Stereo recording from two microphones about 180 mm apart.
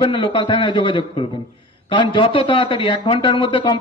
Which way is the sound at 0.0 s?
30° left (ahead or behind).